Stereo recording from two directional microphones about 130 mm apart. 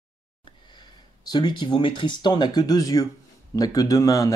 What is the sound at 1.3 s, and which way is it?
Speech, 35° left (ahead or behind).